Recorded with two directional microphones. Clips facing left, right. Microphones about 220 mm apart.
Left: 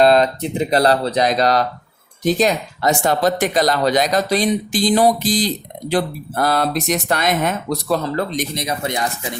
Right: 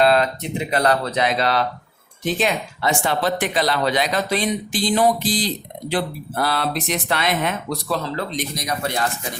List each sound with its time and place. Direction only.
0.0 s speech: 35° left (ahead or behind)
8.5 s speech: 25° left (ahead or behind)